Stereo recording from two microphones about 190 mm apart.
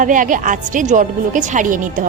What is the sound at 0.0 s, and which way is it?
A woman's voice, 45° right (ahead or behind).